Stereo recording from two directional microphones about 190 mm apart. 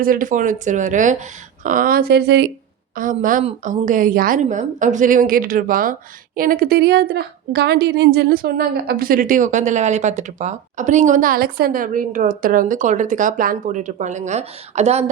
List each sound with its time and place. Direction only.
0.0 s a woman's voice: 45° right (ahead or behind)
2.9 s a woman's voice: 45° right (ahead or behind)